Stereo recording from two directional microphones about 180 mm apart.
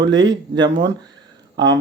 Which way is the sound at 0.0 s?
25° right (ahead or behind).